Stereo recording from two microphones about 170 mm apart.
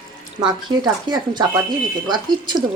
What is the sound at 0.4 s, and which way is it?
Speech, 25° right (ahead or behind).